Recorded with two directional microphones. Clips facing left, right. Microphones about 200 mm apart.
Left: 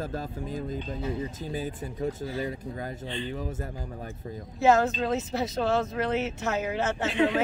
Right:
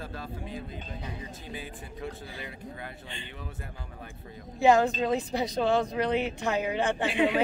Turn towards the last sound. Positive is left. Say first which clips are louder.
# left 1 dB
turn(degrees=-10)  # may be behind; listen again after turning